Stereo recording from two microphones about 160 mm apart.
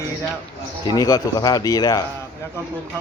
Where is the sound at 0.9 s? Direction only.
20° left (ahead or behind).